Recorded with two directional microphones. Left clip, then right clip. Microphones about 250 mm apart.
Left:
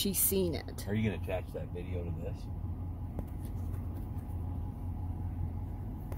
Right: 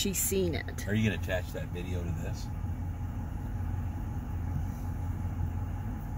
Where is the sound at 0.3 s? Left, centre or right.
Centre.